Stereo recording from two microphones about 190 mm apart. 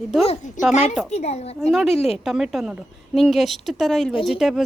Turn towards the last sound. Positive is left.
turn(degrees=0)  # may be behind; listen again after turning